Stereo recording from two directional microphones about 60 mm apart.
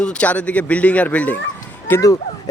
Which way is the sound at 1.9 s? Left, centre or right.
Left.